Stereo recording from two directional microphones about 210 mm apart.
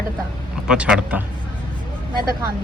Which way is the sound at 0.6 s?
5° right (ahead or behind).